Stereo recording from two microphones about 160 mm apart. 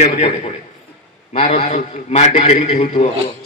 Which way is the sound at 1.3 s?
40° left (ahead or behind).